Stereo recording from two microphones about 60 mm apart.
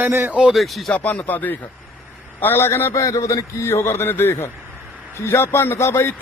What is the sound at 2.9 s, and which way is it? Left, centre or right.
A man's voice, left.